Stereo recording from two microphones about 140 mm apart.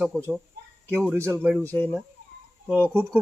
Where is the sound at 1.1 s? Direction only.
20° right (ahead or behind).